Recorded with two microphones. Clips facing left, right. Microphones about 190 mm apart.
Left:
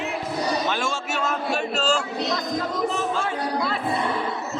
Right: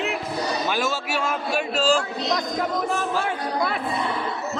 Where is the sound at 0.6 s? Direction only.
5° right (ahead or behind).